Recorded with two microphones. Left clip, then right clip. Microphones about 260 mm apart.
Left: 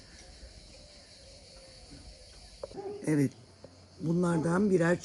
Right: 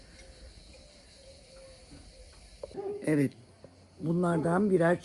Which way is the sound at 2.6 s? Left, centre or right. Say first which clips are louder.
Left 1 dB; right.